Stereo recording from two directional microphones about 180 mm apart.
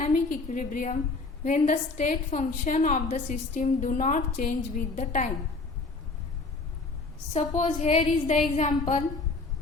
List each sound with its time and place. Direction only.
0.0 s a woman's voice: 45° left (ahead or behind)
7.3 s a woman's voice: 40° left (ahead or behind)